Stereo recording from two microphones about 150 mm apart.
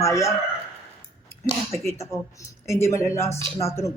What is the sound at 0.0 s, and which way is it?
Speech, 20° left (ahead or behind).